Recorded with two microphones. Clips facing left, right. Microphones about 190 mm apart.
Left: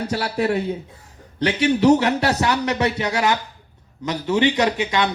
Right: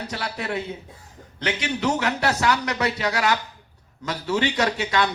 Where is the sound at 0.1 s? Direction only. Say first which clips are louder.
Left 9 dB; 40° left (ahead or behind).